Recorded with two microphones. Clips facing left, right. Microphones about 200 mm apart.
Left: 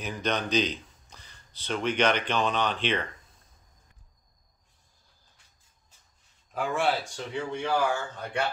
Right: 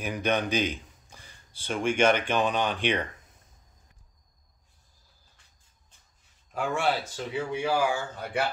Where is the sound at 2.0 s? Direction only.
50° right (ahead or behind).